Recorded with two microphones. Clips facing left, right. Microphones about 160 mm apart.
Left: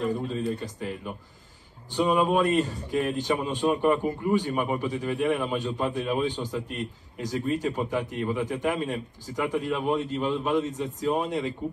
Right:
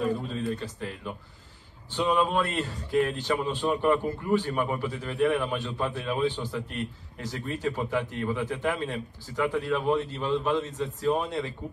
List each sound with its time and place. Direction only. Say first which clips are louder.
0.1 s a man's voice: left 2 dB; 20° left (ahead or behind)